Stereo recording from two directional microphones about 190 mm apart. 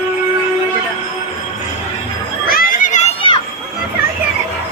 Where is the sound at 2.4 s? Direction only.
50° left (ahead or behind).